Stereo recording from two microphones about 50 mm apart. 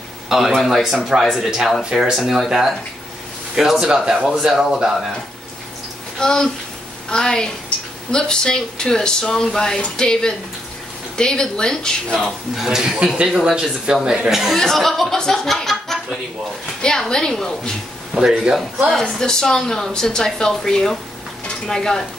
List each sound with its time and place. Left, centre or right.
0.3 s speech: centre
0.7 s speech: centre
1.2 s speech: centre
6.1 s speech: centre
12.6 s speech: centre
14.6 s speech: centre
18.1 s speech: centre
19.1 s speech: centre
21.5 s stir: centre